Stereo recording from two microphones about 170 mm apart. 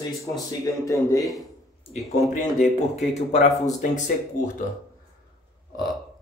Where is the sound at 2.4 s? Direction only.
45° left (ahead or behind).